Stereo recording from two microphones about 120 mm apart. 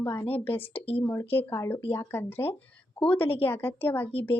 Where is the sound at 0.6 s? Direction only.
50° left (ahead or behind).